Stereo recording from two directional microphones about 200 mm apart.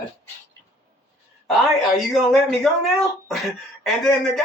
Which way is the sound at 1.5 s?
Centre (ahead or behind).